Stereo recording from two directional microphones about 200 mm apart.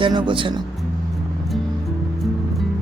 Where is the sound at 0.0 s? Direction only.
25° right (ahead or behind).